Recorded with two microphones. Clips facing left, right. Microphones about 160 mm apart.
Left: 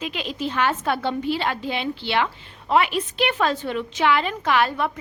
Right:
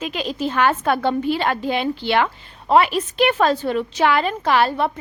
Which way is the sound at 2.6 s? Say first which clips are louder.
Right 4 dB; 40° right (ahead or behind).